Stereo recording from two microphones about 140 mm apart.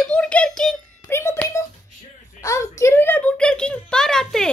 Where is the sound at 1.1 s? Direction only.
20° left (ahead or behind).